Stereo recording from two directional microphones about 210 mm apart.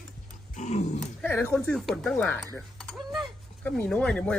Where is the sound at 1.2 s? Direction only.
10° left (ahead or behind).